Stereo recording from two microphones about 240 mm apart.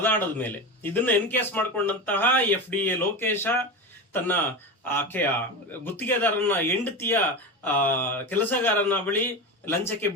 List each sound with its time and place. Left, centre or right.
0.0 s a man's voice: centre